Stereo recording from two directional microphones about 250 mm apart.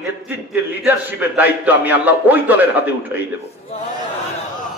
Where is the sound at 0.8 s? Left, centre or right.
Centre.